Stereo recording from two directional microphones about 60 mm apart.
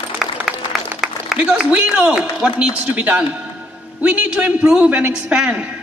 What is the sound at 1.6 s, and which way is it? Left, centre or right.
A man's voice, right.